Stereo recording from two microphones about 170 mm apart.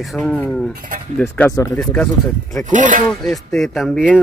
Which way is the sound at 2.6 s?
50° right (ahead or behind).